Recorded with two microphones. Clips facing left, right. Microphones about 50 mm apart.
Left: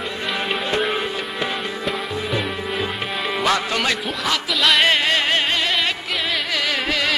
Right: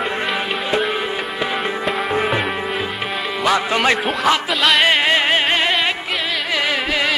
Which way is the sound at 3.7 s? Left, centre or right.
Right.